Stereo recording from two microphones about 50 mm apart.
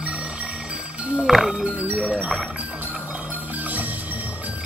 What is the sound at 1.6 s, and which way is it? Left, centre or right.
Music, right.